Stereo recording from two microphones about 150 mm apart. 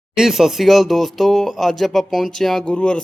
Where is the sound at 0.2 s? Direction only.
Centre (ahead or behind).